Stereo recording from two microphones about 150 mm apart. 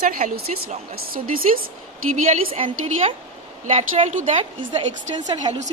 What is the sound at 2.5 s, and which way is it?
A woman's voice, 40° right (ahead or behind).